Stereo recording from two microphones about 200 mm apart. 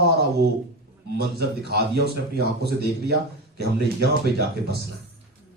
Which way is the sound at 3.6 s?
55° right (ahead or behind).